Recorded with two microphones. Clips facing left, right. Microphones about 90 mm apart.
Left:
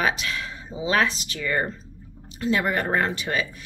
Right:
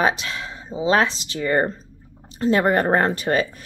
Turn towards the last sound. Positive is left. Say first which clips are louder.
# right 5 dB
turn(degrees=-40)  # may be behind; listen again after turning